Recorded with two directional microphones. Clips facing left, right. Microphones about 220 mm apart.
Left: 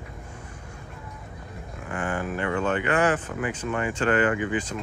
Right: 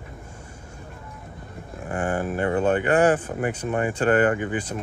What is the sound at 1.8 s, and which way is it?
Speech, 45° right (ahead or behind).